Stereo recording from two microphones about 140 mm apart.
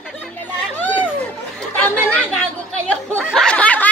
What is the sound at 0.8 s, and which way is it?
Chatter, 10° left (ahead or behind).